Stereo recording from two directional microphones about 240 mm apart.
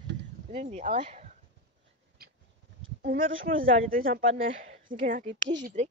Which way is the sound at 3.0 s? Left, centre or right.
Right.